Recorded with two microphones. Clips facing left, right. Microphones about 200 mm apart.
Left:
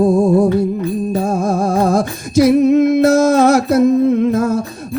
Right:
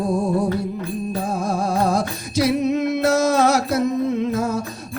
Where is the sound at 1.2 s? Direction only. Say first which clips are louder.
Left 5 dB; 45° left (ahead or behind).